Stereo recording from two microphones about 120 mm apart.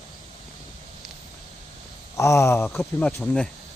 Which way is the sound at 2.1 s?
25° left (ahead or behind).